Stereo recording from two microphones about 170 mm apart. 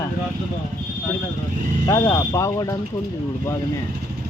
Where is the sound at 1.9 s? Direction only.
20° left (ahead or behind).